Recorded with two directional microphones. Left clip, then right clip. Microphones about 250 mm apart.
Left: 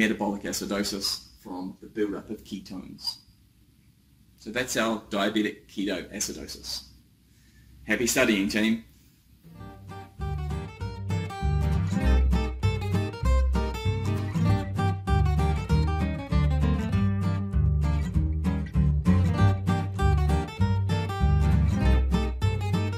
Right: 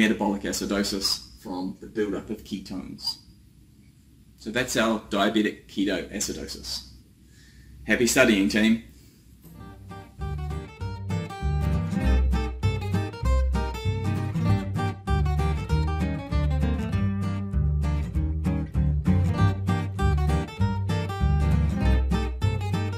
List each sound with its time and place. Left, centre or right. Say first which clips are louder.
0.0 s speech: right 2 dB; centre
2.7 s speech: right 5 dB; centre
4.5 s speech: right 3 dB; centre
7.8 s speech: right 4 dB; centre
9.6 s music: left 1 dB; centre